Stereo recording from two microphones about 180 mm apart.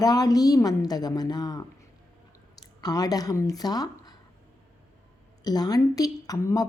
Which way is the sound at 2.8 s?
20° left (ahead or behind).